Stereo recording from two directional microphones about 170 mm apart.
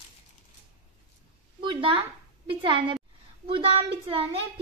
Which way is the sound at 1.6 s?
30° right (ahead or behind).